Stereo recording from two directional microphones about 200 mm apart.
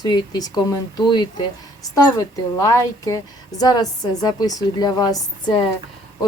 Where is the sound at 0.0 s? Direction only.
20° left (ahead or behind).